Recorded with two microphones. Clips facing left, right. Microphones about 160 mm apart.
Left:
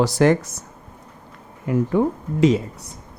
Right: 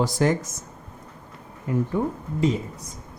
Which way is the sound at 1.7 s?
80° left.